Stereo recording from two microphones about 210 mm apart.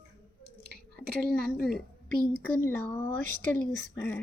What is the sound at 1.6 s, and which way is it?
Speech, centre (ahead or behind).